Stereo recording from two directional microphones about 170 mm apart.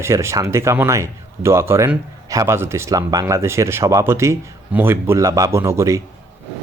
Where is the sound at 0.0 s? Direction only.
15° right (ahead or behind).